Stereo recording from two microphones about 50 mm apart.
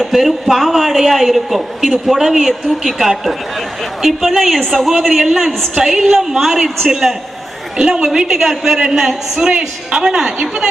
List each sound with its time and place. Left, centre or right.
0.0 s a woman's voice: centre